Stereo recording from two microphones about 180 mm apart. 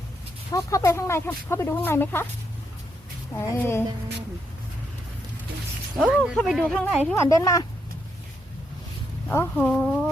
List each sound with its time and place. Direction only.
0.5 s speech: 15° left (ahead or behind)
3.3 s speech: 15° left (ahead or behind)
6.0 s speech: centre (ahead or behind)
7.1 s speech: 15° left (ahead or behind)
9.3 s speech: 10° left (ahead or behind)